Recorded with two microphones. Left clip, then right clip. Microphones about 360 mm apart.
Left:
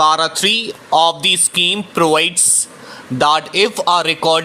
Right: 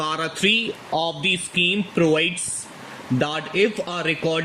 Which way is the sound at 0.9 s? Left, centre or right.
Left.